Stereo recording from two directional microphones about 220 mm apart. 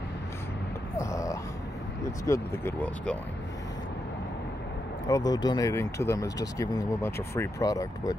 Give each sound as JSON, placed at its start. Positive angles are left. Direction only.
{"t": 0.9, "sound": "a sound", "side_deg": 15}
{"t": 2.2, "sound": "speech", "side_deg": 10}
{"t": 5.0, "sound": "speech", "side_deg": 15}